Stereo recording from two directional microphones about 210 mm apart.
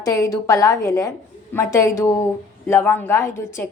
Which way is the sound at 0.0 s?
15° left (ahead or behind).